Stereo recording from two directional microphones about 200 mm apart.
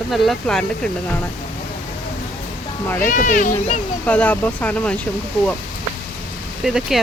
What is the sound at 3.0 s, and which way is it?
Speech, 40° left (ahead or behind).